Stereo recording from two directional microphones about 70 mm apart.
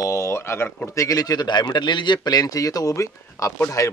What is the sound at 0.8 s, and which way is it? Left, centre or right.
A man's voice, left.